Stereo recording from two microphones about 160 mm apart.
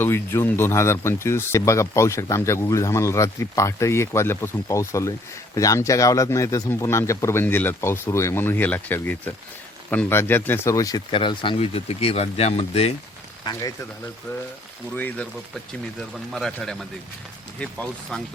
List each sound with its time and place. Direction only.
0.0 s speech: 15° left (ahead or behind); by 12.9 s 40° left (ahead or behind)
13.4 s speech: 25° left (ahead or behind)
14.9 s speech: 10° left (ahead or behind)